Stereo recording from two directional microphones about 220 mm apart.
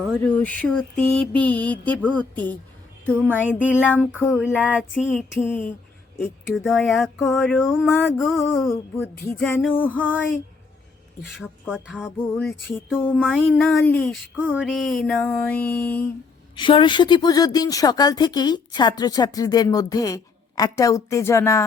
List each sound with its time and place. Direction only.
0.0 s mantra: 5° left (ahead or behind)
2.0 s a woman's voice: 5° left (ahead or behind)
3.6 s a sound: 5° right (ahead or behind)
4.3 s mantra: 5° right (ahead or behind)
5.0 s a woman's voice: 10° left (ahead or behind)
6.1 s mantra: centre (ahead or behind)
8.7 s a woman's voice: 10° left (ahead or behind)
11.3 s mantra: 5° right (ahead or behind)
14.4 s mantra: 5° right (ahead or behind)
16.6 s a woman's voice: 20° left (ahead or behind)